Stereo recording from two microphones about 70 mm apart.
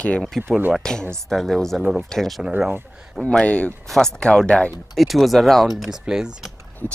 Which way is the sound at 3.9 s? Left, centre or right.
Centre.